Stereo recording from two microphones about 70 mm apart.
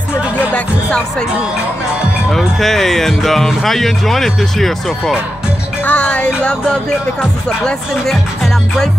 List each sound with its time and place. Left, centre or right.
2.3 s speech: centre
5.9 s speech: centre